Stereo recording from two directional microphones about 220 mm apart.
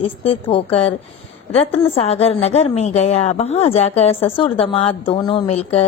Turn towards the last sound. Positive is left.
turn(degrees=30)  # may be behind; listen again after turning